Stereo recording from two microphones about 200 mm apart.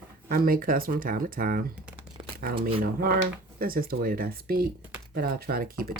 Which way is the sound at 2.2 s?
25° right (ahead or behind).